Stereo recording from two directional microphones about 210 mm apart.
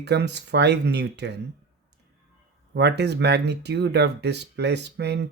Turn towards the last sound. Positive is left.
turn(degrees=-55)  # may be behind; listen again after turning